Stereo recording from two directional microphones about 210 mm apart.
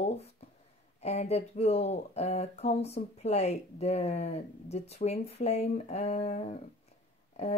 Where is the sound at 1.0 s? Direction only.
30° left (ahead or behind).